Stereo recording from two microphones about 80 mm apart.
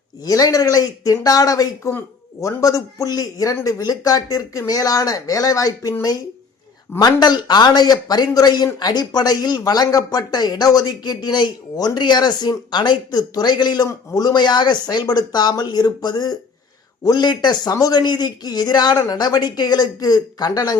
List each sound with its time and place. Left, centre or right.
0.3 s speech: left
7.0 s speech: left
13.8 s speech: left